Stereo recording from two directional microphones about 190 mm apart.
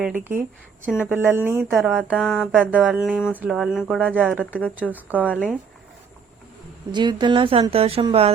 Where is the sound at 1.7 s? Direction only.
Centre (ahead or behind).